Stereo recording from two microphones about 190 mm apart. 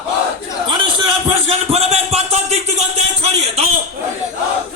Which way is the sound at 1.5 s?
35° right (ahead or behind).